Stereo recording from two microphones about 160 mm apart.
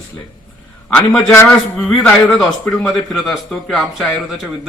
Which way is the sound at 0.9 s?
10° left (ahead or behind).